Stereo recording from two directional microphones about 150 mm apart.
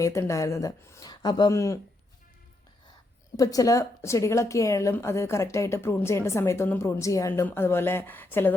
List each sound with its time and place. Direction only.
0.0 s a woman's voice: 20° left (ahead or behind)
3.3 s a woman's voice: 25° left (ahead or behind)